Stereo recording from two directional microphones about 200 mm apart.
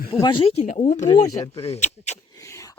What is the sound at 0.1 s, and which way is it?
Speech, 25° left (ahead or behind).